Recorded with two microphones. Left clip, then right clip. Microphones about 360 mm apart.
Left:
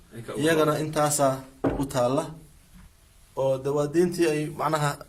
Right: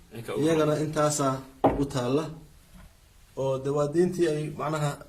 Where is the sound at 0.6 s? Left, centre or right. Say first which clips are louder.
Left 1 dB; left.